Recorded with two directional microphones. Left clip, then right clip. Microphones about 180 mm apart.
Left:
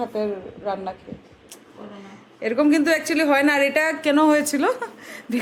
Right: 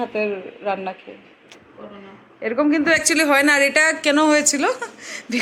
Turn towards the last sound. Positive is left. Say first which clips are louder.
# right 3 dB
turn(degrees=15)  # may be behind; listen again after turning